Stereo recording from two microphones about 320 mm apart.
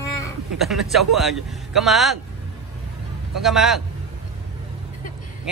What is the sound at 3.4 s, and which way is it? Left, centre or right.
Speech, centre.